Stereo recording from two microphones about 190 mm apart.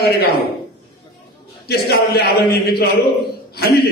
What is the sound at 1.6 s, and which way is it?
A man's voice, 55° left (ahead or behind).